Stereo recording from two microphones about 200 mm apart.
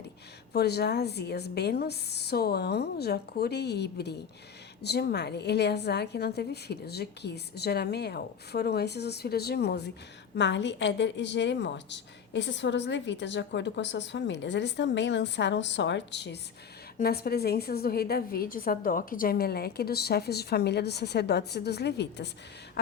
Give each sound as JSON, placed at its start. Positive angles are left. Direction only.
{"t": 0.5, "sound": "a woman's voice", "side_deg": 55}